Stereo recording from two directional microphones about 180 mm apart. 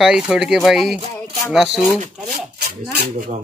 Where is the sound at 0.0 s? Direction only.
5° right (ahead or behind).